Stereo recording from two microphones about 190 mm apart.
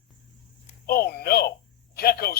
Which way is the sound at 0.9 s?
55° left (ahead or behind).